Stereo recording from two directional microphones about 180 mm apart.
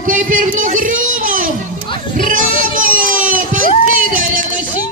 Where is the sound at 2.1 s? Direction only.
50° right (ahead or behind).